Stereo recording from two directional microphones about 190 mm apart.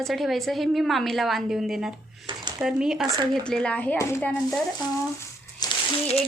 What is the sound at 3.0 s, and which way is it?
Speech, 25° right (ahead or behind).